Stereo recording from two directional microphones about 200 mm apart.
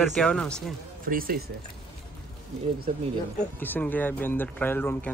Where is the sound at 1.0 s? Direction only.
45° right (ahead or behind).